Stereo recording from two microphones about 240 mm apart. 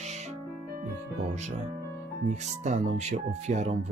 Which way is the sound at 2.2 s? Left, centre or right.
Right.